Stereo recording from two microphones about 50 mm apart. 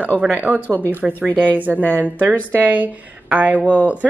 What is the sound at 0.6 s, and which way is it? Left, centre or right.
Speech, left.